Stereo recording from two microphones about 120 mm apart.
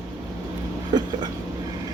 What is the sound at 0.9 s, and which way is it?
Speech, 35° right (ahead or behind).